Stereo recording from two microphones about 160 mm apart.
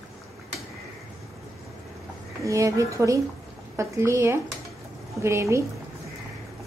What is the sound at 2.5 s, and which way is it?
Speech, 20° right (ahead or behind).